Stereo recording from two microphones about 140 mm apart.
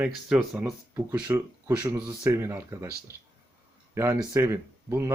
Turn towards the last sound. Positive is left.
turn(degrees=-20)  # may be behind; listen again after turning